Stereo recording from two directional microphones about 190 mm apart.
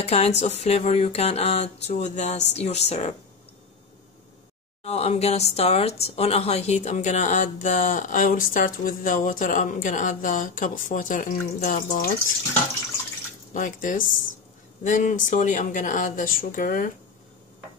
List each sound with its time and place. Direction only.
0.0 s music: 30° left (ahead or behind)
4.8 s speech: 35° left (ahead or behind)
13.5 s speech: 45° left (ahead or behind)